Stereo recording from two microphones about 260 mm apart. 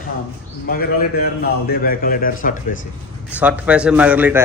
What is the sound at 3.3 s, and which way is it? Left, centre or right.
A man's voice, centre.